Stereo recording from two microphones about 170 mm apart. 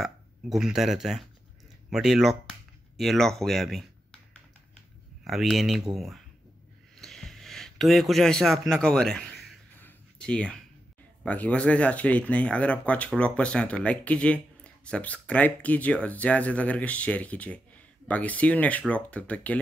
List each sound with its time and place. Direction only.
0.0 s speech: 5° right (ahead or behind)
5.2 s speech: centre (ahead or behind)
7.0 s a sound: centre (ahead or behind)
11.2 s speech: 10° left (ahead or behind)